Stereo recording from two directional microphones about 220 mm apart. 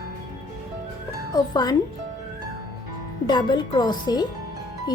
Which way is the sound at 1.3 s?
20° left (ahead or behind).